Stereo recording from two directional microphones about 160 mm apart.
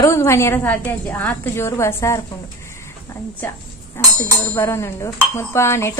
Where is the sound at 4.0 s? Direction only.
15° left (ahead or behind).